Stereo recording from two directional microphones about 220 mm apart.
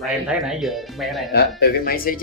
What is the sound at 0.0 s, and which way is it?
Speech, centre (ahead or behind).